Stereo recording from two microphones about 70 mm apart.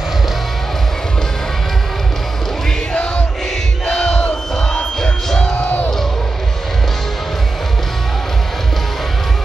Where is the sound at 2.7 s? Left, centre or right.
Centre.